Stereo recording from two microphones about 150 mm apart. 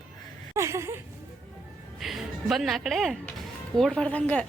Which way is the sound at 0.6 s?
20° right (ahead or behind).